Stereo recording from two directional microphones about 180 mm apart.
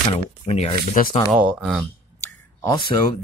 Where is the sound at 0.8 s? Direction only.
50° left (ahead or behind).